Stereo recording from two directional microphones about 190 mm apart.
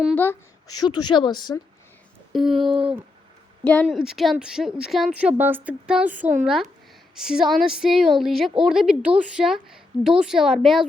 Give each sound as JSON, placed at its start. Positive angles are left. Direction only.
{"t": 0.2, "sound": "speech", "side_deg": 15}
{"t": 2.3, "sound": "a woman's voice", "side_deg": 0}